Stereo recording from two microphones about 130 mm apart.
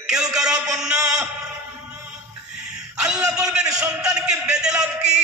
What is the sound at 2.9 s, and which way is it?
Speech, 5° right (ahead or behind).